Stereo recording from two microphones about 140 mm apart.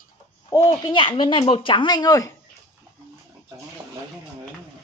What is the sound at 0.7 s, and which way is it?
Speech, 35° left (ahead or behind).